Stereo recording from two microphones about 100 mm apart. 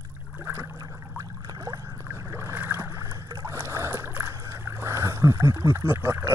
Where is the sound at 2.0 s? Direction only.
20° right (ahead or behind).